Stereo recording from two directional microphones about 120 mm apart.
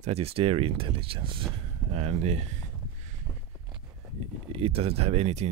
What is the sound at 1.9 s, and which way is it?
Speech, 60° right (ahead or behind).